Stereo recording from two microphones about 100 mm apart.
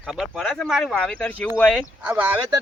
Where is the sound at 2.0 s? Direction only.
15° right (ahead or behind).